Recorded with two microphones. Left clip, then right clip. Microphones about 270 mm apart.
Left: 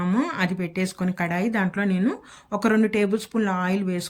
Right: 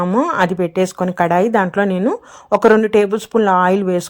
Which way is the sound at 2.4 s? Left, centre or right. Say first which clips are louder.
Right 11 dB; right.